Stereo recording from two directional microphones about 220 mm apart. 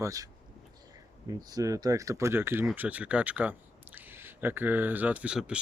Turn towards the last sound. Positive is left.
turn(degrees=-5)  # may be behind; listen again after turning